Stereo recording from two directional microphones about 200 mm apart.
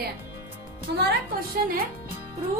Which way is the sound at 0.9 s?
55° right (ahead or behind).